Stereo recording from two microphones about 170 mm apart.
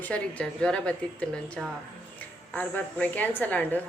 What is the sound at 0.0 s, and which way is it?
A woman's voice, 10° left (ahead or behind).